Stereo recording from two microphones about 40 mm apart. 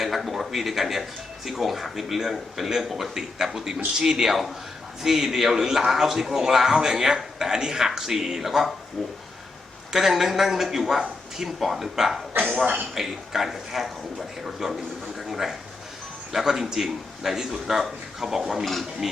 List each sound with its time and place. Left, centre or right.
0.0 s speech: centre
9.9 s speech: centre
12.3 s speech: right
12.9 s a man's voice: centre
18.6 s speech: centre